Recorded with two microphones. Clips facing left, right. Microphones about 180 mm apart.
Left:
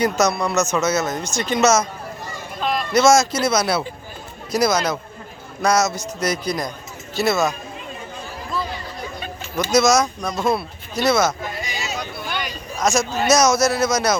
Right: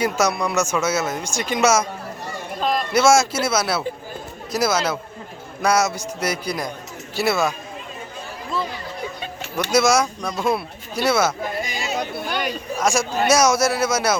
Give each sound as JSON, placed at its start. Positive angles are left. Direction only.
{"t": 0.0, "sound": "speech", "side_deg": -10}
{"t": 2.6, "sound": "a sound", "side_deg": -40}
{"t": 2.9, "sound": "speech", "side_deg": -10}
{"t": 9.7, "sound": "speech", "side_deg": -10}
{"t": 11.4, "sound": "a sound", "side_deg": -50}
{"t": 12.8, "sound": "speech", "side_deg": -10}